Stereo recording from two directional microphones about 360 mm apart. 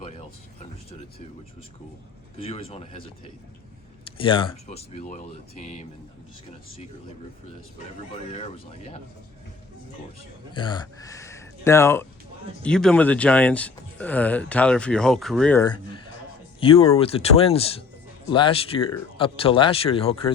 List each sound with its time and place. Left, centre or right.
0.0 s a sound: centre
2.4 s speech: centre
4.0 s speech: centre
8.3 s speech: centre
10.5 s speech: centre
16.6 s speech: centre